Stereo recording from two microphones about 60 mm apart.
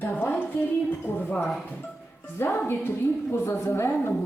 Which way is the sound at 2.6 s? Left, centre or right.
Left.